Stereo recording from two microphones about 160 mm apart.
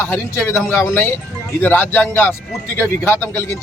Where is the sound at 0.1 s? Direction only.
15° left (ahead or behind).